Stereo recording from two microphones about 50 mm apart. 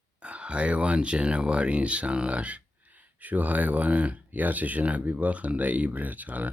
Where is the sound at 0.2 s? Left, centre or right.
Right.